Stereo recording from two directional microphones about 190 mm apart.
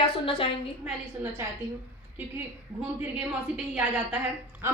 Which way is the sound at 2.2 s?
10° right (ahead or behind).